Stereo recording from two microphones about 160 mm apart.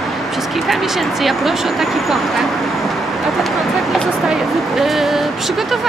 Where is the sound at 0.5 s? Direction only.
Centre (ahead or behind).